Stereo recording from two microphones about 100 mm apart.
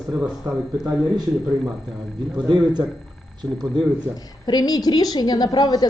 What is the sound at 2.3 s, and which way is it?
A man's voice, 45° right (ahead or behind).